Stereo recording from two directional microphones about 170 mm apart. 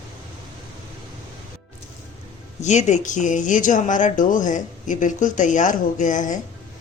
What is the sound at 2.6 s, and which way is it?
Speech, 40° left (ahead or behind).